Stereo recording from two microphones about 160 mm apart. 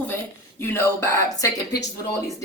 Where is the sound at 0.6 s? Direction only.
15° left (ahead or behind).